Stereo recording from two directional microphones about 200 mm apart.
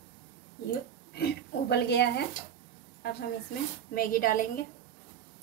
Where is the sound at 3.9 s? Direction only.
45° left (ahead or behind).